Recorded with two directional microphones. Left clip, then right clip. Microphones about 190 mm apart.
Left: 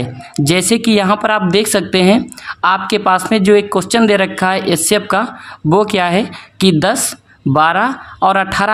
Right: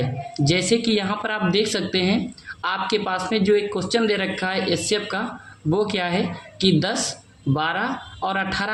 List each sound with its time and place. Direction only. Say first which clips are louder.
0.3 s a woman's voice: left 7 dB; 45° left (ahead or behind)